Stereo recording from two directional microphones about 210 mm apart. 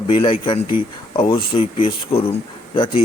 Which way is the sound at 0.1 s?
25° left (ahead or behind).